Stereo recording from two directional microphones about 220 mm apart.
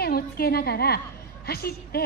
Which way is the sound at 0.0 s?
45° left (ahead or behind).